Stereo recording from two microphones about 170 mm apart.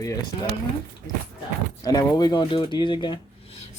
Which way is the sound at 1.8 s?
20° left (ahead or behind).